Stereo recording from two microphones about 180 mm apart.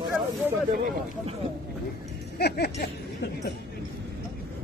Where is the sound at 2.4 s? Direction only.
65° left (ahead or behind).